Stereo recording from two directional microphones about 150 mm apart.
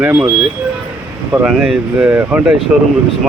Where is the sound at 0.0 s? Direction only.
10° right (ahead or behind).